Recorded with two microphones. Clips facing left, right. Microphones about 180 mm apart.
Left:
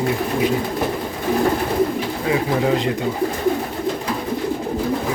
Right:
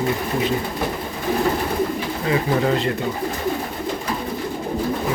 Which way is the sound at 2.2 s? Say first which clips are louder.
Even; 10° left (ahead or behind).